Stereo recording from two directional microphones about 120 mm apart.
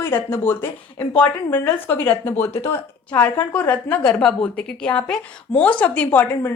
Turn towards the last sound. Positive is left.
turn(degrees=15)  # may be behind; listen again after turning